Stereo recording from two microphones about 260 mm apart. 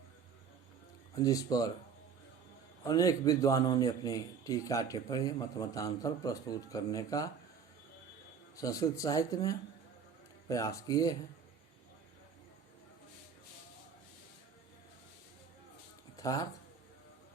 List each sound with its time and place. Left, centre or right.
1.2 s a man's voice: centre
2.8 s a man's voice: centre
8.5 s a man's voice: centre
16.1 s speech: centre